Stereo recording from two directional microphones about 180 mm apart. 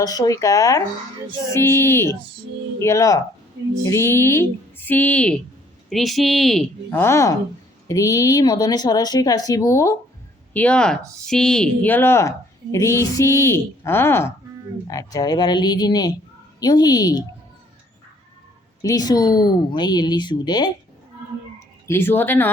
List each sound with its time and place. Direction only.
0.0 s a woman's voice: 20° left (ahead or behind); by 7.0 s centre (ahead or behind)
7.0 s speech: 15° left (ahead or behind)
10.5 s speech: 5° left (ahead or behind)
18.8 s speech: 20° left (ahead or behind)
21.8 s speech: 15° left (ahead or behind)